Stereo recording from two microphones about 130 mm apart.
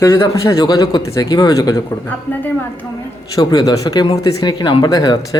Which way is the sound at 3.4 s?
30° left (ahead or behind).